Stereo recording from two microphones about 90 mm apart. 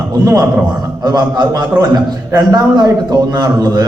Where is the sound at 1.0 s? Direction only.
50° right (ahead or behind).